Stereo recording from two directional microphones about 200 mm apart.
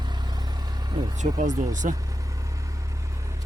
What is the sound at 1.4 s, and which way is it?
Speech, 40° right (ahead or behind).